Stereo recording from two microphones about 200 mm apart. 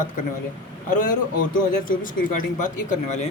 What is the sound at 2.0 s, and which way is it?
Speech, 40° left (ahead or behind).